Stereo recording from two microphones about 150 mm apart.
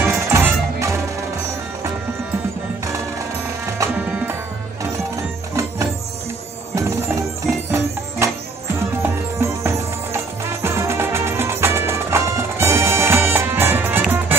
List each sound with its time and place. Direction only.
0.0 s music: 15° right (ahead or behind)
3.7 s music: 20° right (ahead or behind)
9.0 s music: 15° right (ahead or behind)